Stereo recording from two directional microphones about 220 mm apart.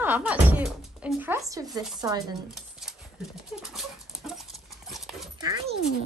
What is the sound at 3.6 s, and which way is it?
Dog, centre (ahead or behind).